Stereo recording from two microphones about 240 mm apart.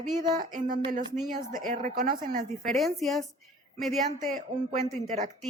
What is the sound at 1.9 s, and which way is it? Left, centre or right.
Speech, right.